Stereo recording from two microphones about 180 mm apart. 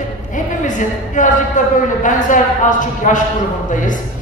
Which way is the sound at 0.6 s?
45° left (ahead or behind).